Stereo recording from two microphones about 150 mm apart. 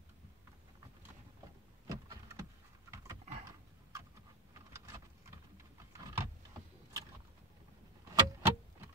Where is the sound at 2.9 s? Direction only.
20° right (ahead or behind).